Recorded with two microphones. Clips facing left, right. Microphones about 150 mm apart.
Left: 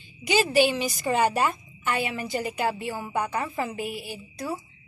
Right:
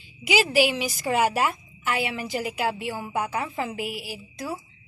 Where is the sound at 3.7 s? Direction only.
90° right.